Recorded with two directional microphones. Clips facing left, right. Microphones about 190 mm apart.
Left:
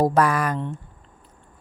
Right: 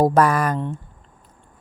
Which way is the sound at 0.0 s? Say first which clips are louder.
Right 3 dB; 45° right (ahead or behind).